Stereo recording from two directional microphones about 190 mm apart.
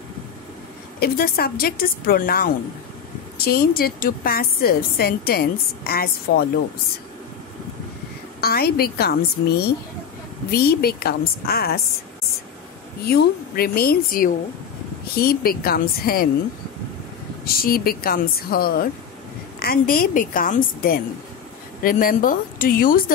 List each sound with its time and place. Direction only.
0.9 s a woman's voice: 50° left (ahead or behind)
8.4 s a woman's voice: 55° left (ahead or behind)
13.0 s a woman's voice: 55° left (ahead or behind)
17.6 s a woman's voice: 50° left (ahead or behind)